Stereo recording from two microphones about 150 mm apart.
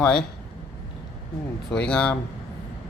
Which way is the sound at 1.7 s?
5° left (ahead or behind).